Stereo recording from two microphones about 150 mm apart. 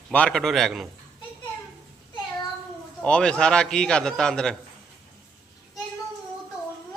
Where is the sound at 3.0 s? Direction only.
5° left (ahead or behind).